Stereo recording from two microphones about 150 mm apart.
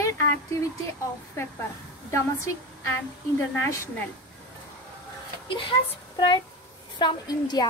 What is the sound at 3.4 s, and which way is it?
Speech, 20° left (ahead or behind).